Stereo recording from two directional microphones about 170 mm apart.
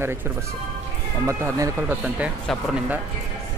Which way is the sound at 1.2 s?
15° right (ahead or behind).